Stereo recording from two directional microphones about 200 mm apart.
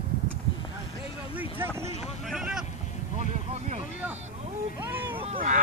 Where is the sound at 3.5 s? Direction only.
35° right (ahead or behind).